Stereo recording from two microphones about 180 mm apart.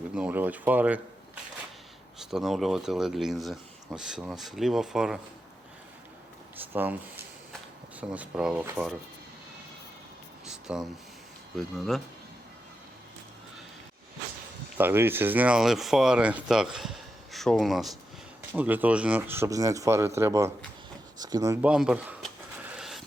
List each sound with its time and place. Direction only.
0.1 s speech: 5° right (ahead or behind)
2.1 s speech: centre (ahead or behind)
6.7 s speech: 10° right (ahead or behind)
10.4 s a sound: 5° right (ahead or behind)
11.5 s speech: centre (ahead or behind)
14.8 s speech: 10° right (ahead or behind)
21.6 s speech: 5° right (ahead or behind)
22.7 s a sound: centre (ahead or behind)